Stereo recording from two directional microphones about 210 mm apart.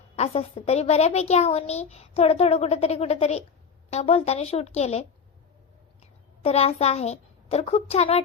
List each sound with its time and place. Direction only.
0.2 s a child's voice: 30° left (ahead or behind)